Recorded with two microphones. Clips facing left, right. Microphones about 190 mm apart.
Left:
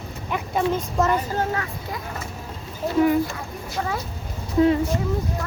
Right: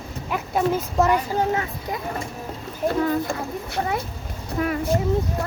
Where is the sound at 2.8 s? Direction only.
15° right (ahead or behind).